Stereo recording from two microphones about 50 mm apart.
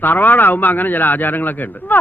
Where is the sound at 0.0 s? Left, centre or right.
Left.